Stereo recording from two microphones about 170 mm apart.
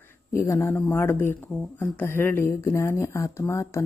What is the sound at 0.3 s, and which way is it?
Speech, 15° left (ahead or behind).